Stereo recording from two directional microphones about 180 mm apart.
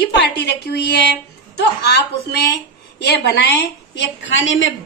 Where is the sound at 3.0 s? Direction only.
70° left (ahead or behind); by 4.7 s 90° left.